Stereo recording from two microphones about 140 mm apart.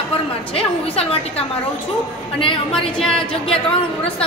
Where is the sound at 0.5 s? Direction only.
45° left (ahead or behind).